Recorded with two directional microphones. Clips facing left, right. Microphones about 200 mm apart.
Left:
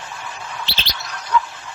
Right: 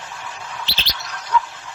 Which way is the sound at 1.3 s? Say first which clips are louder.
Left 1 dB; 60° left (ahead or behind).